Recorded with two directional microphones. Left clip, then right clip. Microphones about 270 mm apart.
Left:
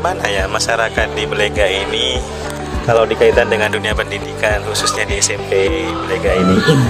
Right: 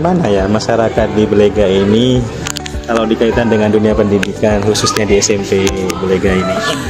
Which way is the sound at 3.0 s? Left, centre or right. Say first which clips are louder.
Left 1 dB; centre.